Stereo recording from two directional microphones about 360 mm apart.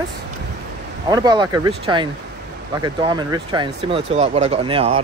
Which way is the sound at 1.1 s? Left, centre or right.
Centre.